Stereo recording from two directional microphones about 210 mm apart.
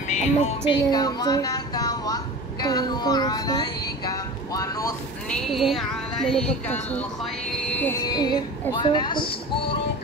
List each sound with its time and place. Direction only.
0.1 s music: 35° left (ahead or behind)
0.9 s a woman's voice: 20° left (ahead or behind)
5.3 s a woman's voice: centre (ahead or behind); by 9.8 s 20° left (ahead or behind)